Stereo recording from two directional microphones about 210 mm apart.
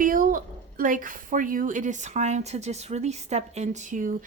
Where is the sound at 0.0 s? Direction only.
40° right (ahead or behind).